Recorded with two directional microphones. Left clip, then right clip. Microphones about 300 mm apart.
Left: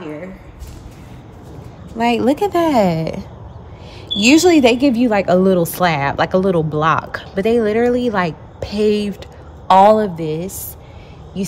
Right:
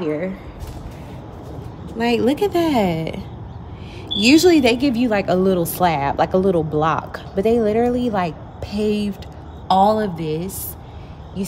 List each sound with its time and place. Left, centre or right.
2.0 s a woman's voice: centre